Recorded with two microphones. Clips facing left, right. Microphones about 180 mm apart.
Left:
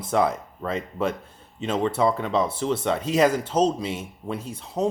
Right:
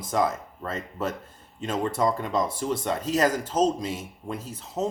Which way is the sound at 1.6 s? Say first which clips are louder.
Left 3 dB; 10° right (ahead or behind).